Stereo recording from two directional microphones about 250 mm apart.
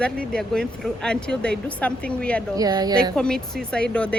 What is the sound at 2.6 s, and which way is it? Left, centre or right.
Speech, centre.